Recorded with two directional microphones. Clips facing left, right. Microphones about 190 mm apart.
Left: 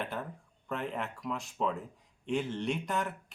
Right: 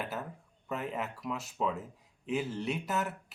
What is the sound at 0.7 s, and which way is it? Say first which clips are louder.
Speech: even; 5° right (ahead or behind).